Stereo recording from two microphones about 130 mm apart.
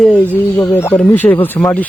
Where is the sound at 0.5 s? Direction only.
20° left (ahead or behind).